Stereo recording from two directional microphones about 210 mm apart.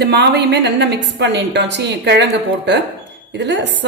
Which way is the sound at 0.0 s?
55° right (ahead or behind).